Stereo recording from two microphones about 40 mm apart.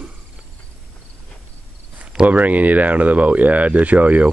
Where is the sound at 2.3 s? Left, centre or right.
Right.